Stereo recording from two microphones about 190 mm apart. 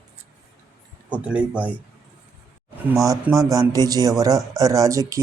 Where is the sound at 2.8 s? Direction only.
15° right (ahead or behind).